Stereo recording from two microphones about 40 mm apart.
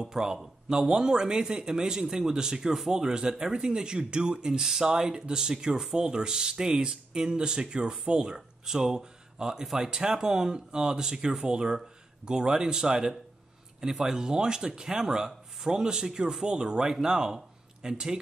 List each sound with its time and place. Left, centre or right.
0.0 s speech: centre